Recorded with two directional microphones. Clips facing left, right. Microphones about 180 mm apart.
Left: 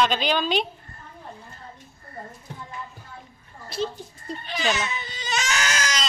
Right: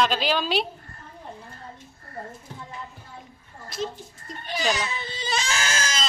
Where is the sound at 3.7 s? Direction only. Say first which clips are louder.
Left 3 dB; 30° left (ahead or behind).